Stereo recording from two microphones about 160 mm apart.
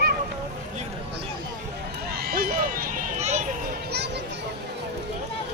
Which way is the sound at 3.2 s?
45° right (ahead or behind).